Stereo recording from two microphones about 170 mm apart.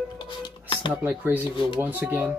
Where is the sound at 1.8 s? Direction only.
10° right (ahead or behind).